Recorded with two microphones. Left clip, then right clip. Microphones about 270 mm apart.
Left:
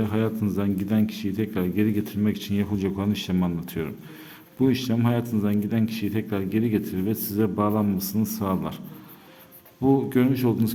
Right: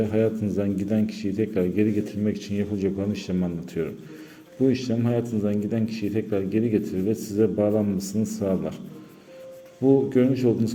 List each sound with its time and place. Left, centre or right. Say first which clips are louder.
0.2 s a man's voice: right 3 dB; centre
10.1 s speech: right 2 dB; centre